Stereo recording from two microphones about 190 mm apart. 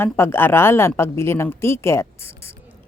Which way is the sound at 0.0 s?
10° left (ahead or behind).